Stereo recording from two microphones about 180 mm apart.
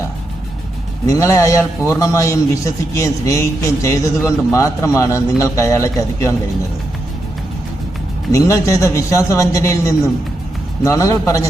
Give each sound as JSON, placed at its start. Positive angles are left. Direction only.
{"t": 1.0, "sound": "a man's voice", "side_deg": 15}
{"t": 8.3, "sound": "a man's voice", "side_deg": 15}